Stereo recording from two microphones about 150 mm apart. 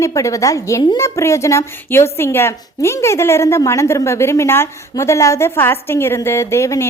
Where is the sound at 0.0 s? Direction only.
20° left (ahead or behind).